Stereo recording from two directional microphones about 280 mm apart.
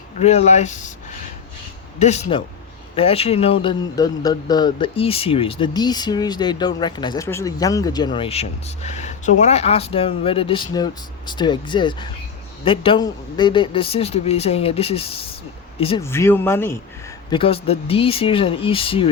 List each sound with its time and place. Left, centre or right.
0.2 s a man's voice: left
2.0 s a man's voice: left
16.0 s speech: centre
17.2 s a man's voice: centre